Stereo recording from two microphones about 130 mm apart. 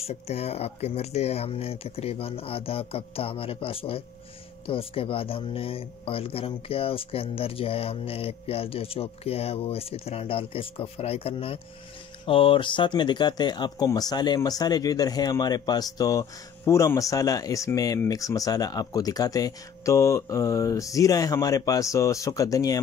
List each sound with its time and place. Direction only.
0.0 s speech: 50° left (ahead or behind); by 22.8 s 25° left (ahead or behind)